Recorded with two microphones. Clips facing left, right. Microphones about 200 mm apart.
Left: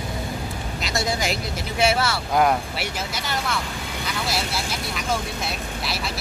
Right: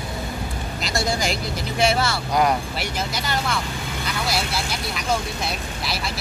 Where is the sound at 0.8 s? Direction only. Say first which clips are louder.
Right 1 dB; centre (ahead or behind).